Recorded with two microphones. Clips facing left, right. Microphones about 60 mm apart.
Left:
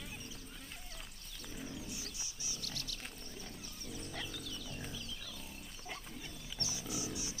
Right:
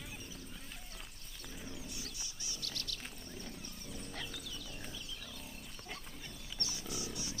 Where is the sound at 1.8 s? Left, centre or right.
Right.